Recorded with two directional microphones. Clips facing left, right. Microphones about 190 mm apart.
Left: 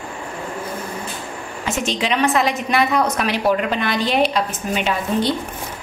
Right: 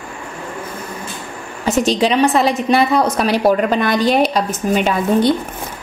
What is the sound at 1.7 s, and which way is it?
A woman's voice, 35° right (ahead or behind).